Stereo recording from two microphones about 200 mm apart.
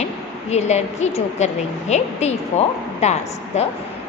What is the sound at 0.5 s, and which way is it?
A woman's voice, 35° left (ahead or behind).